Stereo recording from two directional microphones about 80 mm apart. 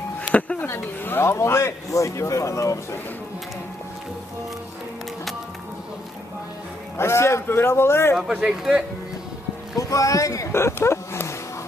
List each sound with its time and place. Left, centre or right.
0.3 s music: centre
0.7 s a man's voice: left
7.0 s a man's voice: left
8.3 s speech: centre
9.8 s speech: left